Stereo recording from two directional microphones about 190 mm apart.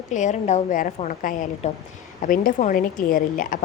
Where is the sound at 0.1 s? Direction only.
40° left (ahead or behind).